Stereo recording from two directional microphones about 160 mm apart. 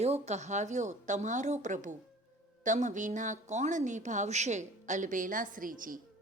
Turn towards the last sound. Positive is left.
turn(degrees=-60)  # may be behind; listen again after turning